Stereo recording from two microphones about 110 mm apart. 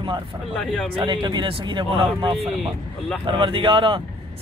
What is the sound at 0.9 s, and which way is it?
Speech, 50° right (ahead or behind).